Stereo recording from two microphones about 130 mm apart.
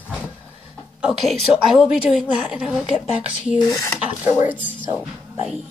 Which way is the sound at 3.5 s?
25° left (ahead or behind).